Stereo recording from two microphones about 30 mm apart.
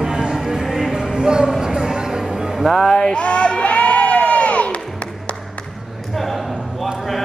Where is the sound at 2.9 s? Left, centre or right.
Left.